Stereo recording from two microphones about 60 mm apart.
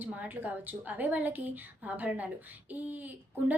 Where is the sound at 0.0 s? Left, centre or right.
Right.